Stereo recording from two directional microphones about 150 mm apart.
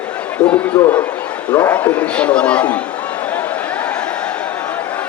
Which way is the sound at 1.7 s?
10° left (ahead or behind).